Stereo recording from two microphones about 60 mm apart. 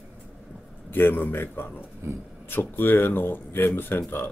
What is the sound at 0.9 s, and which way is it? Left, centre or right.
Speech, left.